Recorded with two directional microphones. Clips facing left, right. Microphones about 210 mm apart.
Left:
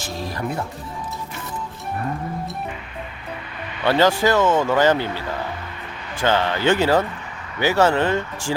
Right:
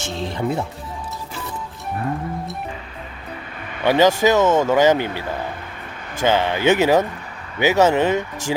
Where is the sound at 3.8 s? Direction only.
15° right (ahead or behind).